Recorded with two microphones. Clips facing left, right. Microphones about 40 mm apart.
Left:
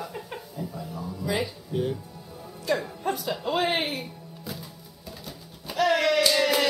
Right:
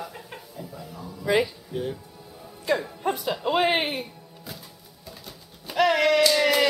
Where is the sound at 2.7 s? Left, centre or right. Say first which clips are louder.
Right 2 dB; right.